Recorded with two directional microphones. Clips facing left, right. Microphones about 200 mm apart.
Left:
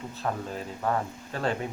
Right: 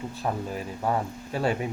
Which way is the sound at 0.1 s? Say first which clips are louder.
Even; 10° right (ahead or behind).